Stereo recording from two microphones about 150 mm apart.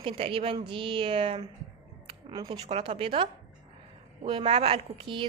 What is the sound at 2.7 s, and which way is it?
Speech, 40° right (ahead or behind).